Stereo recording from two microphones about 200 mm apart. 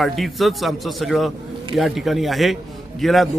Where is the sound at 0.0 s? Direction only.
Centre (ahead or behind).